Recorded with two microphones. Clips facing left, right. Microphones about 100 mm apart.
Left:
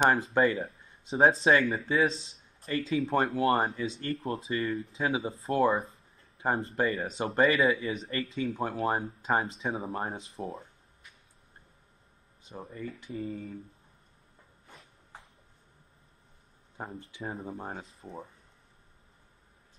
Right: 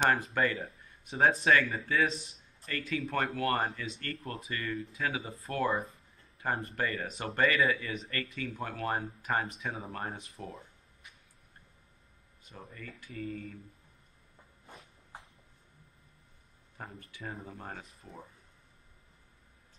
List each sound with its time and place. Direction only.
0.0 s speech: 25° left (ahead or behind)
12.4 s speech: 25° left (ahead or behind)
16.7 s speech: 25° left (ahead or behind)